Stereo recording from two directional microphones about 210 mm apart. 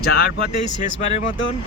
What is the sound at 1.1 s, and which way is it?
Speech, 30° left (ahead or behind).